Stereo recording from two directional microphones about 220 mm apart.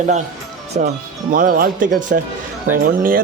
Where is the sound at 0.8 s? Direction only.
30° right (ahead or behind).